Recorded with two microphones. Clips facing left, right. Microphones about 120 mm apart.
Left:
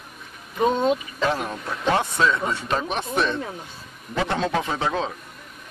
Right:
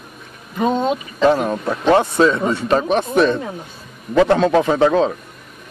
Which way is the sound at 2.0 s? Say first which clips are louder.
Right 7 dB; 35° right (ahead or behind).